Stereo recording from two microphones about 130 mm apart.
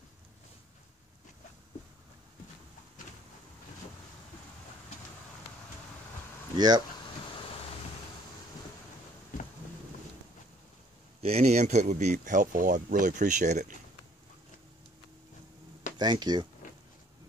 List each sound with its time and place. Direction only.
6.5 s speech: 30° right (ahead or behind)
7.2 s vehicle: 40° left (ahead or behind)
11.2 s speech: 55° right (ahead or behind)
16.0 s speech: 35° right (ahead or behind)